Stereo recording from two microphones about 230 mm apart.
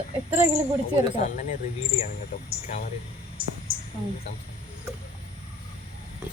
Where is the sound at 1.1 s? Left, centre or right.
Left.